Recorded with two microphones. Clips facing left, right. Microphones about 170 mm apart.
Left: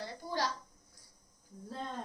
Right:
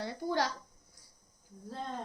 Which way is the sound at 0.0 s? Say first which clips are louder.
Right 5 dB; 65° right (ahead or behind).